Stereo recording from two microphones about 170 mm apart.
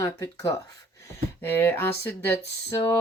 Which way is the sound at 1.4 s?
15° left (ahead or behind).